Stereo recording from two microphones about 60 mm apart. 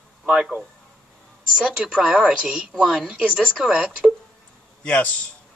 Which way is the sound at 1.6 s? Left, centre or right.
Right.